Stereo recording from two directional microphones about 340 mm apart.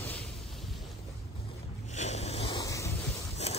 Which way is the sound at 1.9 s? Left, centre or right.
Centre.